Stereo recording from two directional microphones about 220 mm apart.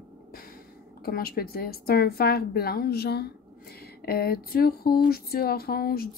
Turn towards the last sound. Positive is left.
turn(degrees=45)  # may be behind; listen again after turning